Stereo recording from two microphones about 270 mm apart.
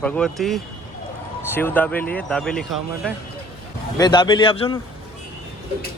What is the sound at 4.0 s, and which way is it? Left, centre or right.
Speech, centre.